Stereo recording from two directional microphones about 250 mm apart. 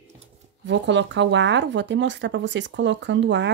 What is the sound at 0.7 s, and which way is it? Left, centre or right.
Speech, right.